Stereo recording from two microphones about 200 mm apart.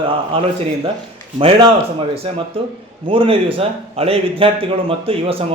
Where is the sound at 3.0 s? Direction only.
25° right (ahead or behind).